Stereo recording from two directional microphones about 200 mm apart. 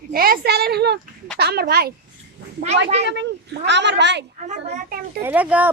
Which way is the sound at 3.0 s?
60° right (ahead or behind).